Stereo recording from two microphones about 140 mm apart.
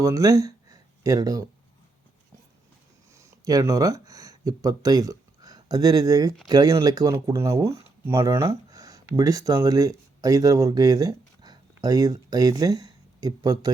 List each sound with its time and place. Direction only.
0.0 s speech: 25° right (ahead or behind)
3.2 s speech: 20° right (ahead or behind)